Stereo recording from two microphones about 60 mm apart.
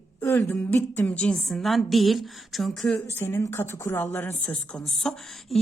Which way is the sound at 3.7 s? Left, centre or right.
Left.